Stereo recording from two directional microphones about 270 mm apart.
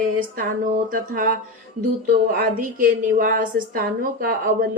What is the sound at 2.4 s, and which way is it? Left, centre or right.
A woman's voice, right.